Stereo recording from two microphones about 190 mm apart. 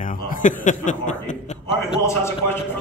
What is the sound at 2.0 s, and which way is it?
Speech, 15° left (ahead or behind).